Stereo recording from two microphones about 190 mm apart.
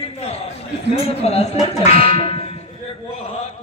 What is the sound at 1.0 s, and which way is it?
Speech, 30° left (ahead or behind).